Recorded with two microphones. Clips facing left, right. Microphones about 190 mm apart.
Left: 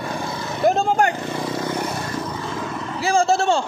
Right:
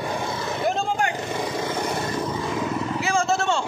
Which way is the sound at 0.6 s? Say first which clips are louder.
Left 7 dB; 40° left (ahead or behind).